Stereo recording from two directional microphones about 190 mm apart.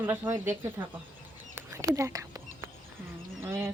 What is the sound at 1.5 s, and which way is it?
Whispering, 15° right (ahead or behind).